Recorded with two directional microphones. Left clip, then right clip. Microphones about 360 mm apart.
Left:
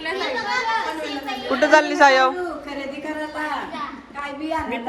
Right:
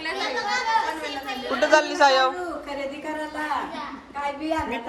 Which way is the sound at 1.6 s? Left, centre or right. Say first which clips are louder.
Left 4 dB; centre.